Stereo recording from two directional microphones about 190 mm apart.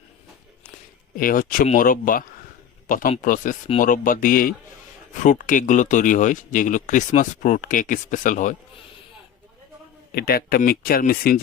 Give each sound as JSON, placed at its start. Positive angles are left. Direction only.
{"t": 1.1, "sound": "speech", "side_deg": 45}
{"t": 10.1, "sound": "speech", "side_deg": 55}